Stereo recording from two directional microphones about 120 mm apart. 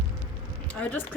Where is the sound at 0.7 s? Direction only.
10° left (ahead or behind).